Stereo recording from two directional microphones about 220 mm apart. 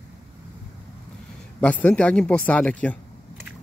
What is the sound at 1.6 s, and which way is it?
Speech, 5° left (ahead or behind).